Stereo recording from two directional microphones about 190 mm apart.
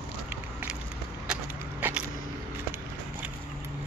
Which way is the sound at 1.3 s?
10° right (ahead or behind).